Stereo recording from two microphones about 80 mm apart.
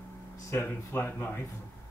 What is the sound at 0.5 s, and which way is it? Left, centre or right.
Speech, left.